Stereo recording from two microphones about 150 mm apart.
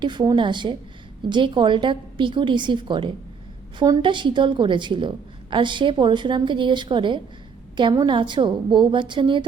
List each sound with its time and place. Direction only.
0.0 s a woman's voice: 30° right (ahead or behind)